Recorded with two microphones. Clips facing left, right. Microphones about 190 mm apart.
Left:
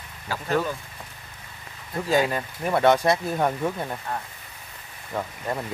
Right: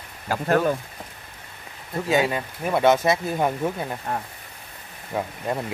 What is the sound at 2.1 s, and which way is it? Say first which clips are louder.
Speech: right 1 dB; 5° right (ahead or behind).